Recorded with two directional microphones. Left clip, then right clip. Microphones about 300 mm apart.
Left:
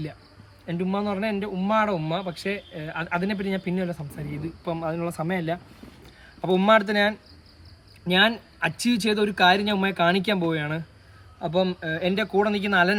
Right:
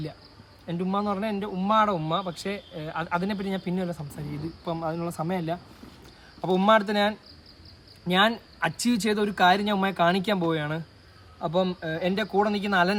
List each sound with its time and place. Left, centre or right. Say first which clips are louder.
0.8 s speech: left 1 dB; centre